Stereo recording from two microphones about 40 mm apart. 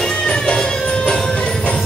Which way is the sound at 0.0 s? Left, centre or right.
Left.